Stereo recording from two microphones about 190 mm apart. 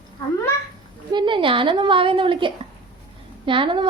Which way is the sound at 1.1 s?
25° right (ahead or behind).